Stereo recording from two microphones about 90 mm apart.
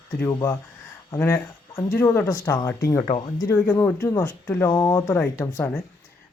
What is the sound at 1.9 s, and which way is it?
Speech, 25° left (ahead or behind).